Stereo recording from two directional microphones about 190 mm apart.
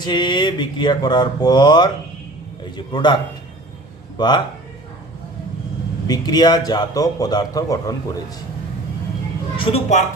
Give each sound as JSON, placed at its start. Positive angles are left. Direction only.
{"t": 0.0, "sound": "a man's voice", "side_deg": 25}
{"t": 6.1, "sound": "a man's voice", "side_deg": 20}
{"t": 9.6, "sound": "a woman's voice", "side_deg": 30}